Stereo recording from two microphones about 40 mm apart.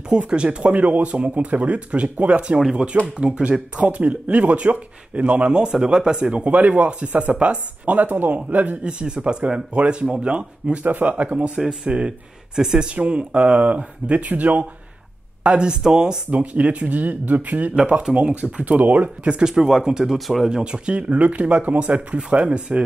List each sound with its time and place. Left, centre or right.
0.3 s speech: right
8.8 s speech: right
11.5 s speech: centre
12.9 s speech: right
15.4 s speech: right
16.3 s speech: right
16.9 s speech: right
19.4 s speech: centre